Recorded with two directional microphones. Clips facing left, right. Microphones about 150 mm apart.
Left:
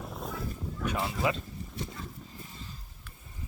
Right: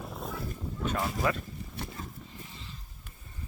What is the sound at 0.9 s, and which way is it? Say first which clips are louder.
Speech: even; 15° left (ahead or behind).